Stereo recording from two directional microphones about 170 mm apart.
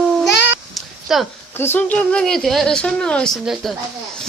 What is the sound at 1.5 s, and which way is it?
Speech, 10° left (ahead or behind).